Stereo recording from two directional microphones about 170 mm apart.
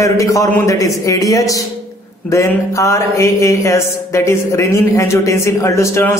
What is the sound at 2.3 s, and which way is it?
Mantra, 15° left (ahead or behind).